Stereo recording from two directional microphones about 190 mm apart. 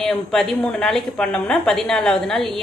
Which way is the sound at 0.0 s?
Centre (ahead or behind).